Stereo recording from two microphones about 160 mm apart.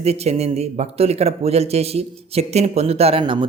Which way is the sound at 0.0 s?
40° right (ahead or behind).